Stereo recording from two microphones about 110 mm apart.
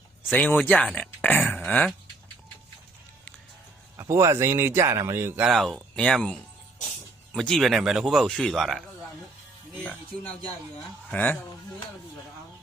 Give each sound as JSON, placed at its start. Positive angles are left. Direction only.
{"t": 0.2, "sound": "speech", "side_deg": 15}
{"t": 3.9, "sound": "a man's voice", "side_deg": -25}
{"t": 5.4, "sound": "speech", "side_deg": 0}
{"t": 11.1, "sound": "speech", "side_deg": 15}